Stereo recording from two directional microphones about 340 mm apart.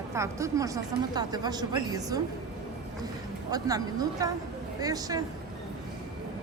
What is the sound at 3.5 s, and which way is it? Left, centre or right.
Speech, centre.